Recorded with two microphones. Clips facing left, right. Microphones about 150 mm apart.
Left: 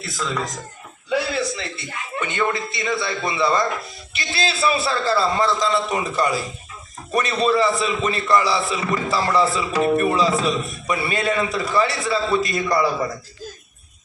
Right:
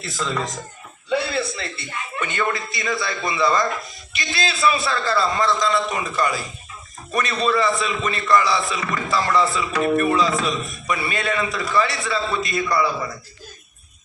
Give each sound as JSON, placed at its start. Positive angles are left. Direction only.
{"t": 0.0, "sound": "speech", "side_deg": 0}
{"t": 1.1, "sound": "a sound", "side_deg": 15}
{"t": 2.2, "sound": "a man's voice", "side_deg": 20}